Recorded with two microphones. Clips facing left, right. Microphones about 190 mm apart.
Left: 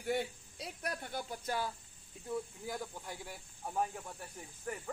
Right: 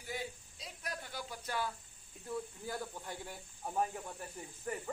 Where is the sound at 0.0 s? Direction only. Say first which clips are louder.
Left 7 dB; 65° left (ahead or behind).